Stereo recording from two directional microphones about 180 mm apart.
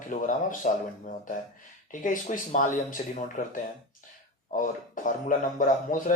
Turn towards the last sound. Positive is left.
turn(degrees=50)  # may be behind; listen again after turning